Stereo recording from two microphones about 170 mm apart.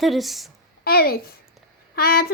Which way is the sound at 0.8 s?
65° left (ahead or behind).